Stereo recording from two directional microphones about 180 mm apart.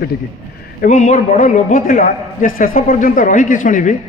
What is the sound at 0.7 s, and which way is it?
A man's voice, 45° left (ahead or behind).